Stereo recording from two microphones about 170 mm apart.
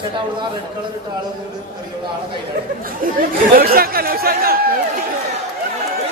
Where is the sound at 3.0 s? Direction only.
55° right (ahead or behind).